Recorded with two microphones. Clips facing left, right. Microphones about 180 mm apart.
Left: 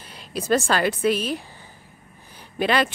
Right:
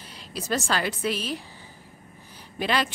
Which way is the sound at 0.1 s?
55° left (ahead or behind).